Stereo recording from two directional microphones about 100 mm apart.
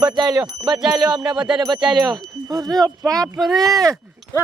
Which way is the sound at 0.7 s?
5° right (ahead or behind).